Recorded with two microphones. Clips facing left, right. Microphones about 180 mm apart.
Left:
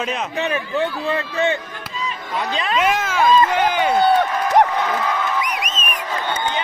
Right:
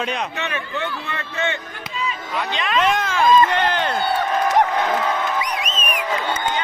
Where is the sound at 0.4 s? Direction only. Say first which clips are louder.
Left 5 dB; 35° left (ahead or behind).